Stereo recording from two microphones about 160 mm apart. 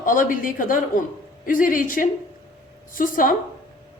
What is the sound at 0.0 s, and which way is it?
A woman's voice, 55° left (ahead or behind).